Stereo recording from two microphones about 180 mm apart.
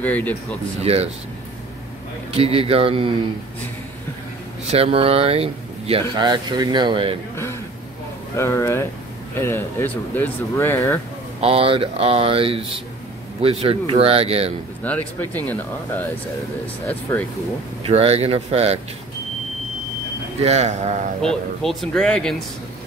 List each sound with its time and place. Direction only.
0.0 s speech: 10° left (ahead or behind)
0.8 s speech: 35° right (ahead or behind)
2.3 s speech: 35° right (ahead or behind)
4.6 s speech: 35° right (ahead or behind)
8.4 s speech: 15° left (ahead or behind)
11.4 s speech: 30° right (ahead or behind)
14.8 s speech: 10° left (ahead or behind)
17.1 s speech: 10° left (ahead or behind)
17.8 s speech: 35° right (ahead or behind)
20.4 s speech: 40° right (ahead or behind)
21.2 s speech: 5° left (ahead or behind)